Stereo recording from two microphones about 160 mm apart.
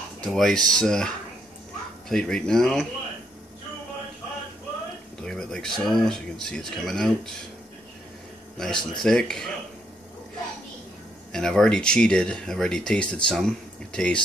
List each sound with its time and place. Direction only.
0.2 s speech: centre (ahead or behind)
5.2 s speech: 5° left (ahead or behind)
8.5 s speech: 5° left (ahead or behind)
11.3 s speech: 5° left (ahead or behind)